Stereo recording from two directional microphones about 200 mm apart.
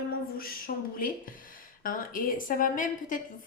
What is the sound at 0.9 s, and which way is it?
A woman's voice, 45° left (ahead or behind).